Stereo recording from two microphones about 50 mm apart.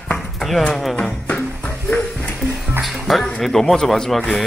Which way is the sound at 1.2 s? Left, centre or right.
Left.